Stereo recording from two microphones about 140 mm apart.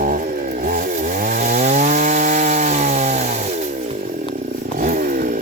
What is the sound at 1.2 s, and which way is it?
Chainsaw, 60° right (ahead or behind).